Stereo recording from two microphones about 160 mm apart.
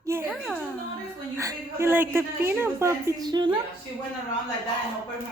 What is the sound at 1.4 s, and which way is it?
A woman's voice, 15° right (ahead or behind).